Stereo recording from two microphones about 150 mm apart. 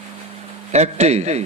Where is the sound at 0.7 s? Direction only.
50° right (ahead or behind).